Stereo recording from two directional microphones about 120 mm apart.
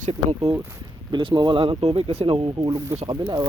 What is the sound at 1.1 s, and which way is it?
Speech, 40° right (ahead or behind).